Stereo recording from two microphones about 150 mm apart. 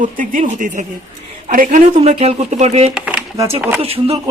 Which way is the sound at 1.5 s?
60° right (ahead or behind).